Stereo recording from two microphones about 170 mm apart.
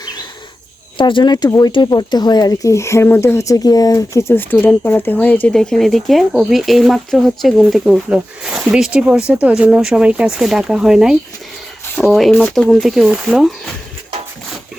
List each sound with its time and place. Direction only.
0.0 s bird: 25° left (ahead or behind)
0.9 s speech: 30° left (ahead or behind); by 12.3 s centre (ahead or behind)
12.3 s speech: 10° left (ahead or behind)
12.5 s speech: centre (ahead or behind)